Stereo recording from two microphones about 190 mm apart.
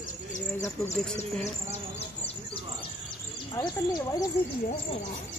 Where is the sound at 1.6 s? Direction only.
30° left (ahead or behind).